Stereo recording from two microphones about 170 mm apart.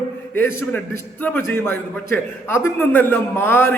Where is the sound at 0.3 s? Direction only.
15° left (ahead or behind).